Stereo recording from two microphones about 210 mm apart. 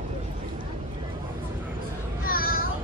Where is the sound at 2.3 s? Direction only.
45° left (ahead or behind).